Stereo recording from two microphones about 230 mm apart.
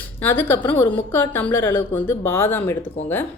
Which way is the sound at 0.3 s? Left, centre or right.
Centre.